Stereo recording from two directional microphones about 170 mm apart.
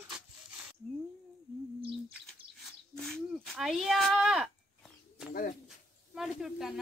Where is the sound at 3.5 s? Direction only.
Centre (ahead or behind).